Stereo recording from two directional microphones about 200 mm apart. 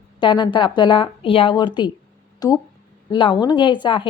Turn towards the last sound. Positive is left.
turn(degrees=25)  # may be behind; listen again after turning